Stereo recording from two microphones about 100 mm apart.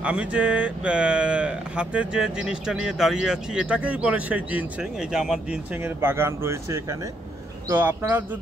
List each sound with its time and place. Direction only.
0.0 s speech: 10° right (ahead or behind)
5.8 s speech: 25° right (ahead or behind)